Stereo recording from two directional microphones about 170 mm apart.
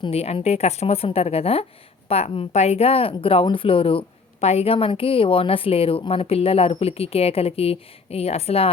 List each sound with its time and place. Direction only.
0.0 s a woman's voice: 35° left (ahead or behind)